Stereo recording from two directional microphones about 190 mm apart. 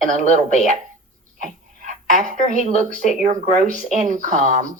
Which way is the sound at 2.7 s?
40° right (ahead or behind).